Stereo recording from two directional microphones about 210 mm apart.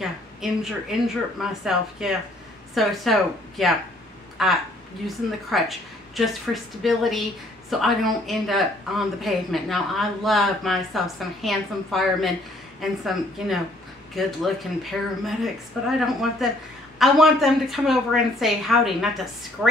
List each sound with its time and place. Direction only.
0.0 s speech: centre (ahead or behind)